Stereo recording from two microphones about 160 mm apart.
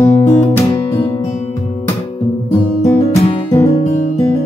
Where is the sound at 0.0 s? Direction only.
20° left (ahead or behind).